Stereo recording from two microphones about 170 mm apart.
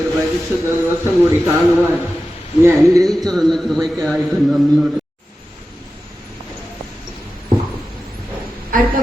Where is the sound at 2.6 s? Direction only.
20° right (ahead or behind).